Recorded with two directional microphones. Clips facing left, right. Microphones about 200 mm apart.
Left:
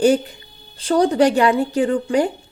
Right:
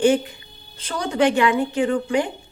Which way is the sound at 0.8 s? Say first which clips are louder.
Left 6 dB; 35° left (ahead or behind).